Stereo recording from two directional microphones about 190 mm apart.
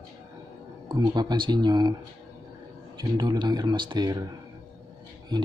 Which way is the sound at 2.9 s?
25° right (ahead or behind).